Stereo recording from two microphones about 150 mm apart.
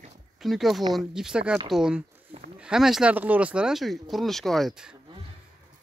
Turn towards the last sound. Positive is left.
turn(degrees=0)  # may be behind; listen again after turning